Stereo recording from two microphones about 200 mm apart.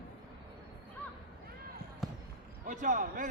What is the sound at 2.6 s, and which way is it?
Speech, 40° right (ahead or behind).